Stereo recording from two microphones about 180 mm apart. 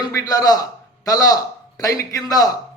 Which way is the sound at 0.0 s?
20° left (ahead or behind).